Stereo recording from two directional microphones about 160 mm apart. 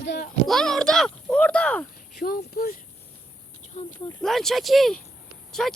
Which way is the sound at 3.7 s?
45° left (ahead or behind).